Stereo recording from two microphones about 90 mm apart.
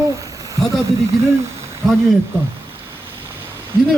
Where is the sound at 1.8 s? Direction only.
Centre (ahead or behind).